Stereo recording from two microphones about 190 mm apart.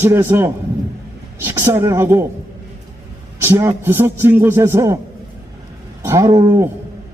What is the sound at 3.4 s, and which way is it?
A man's voice, 15° right (ahead or behind).